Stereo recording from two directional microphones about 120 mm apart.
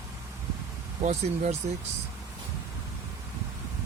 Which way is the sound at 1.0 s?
70° right (ahead or behind).